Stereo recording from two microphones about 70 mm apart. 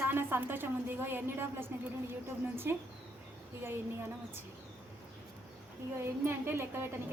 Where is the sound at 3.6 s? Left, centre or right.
Right.